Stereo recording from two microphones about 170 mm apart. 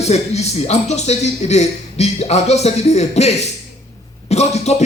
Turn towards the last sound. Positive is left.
turn(degrees=40)  # may be behind; listen again after turning